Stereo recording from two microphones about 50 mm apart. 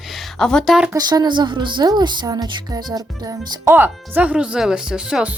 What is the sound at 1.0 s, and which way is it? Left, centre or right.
Speech, right.